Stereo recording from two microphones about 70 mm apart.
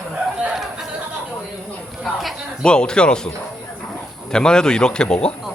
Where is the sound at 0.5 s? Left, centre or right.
Centre.